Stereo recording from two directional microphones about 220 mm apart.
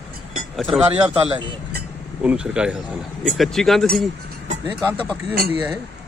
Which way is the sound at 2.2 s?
5° right (ahead or behind).